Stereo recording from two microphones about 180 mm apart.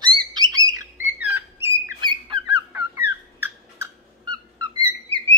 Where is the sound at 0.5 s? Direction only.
20° right (ahead or behind).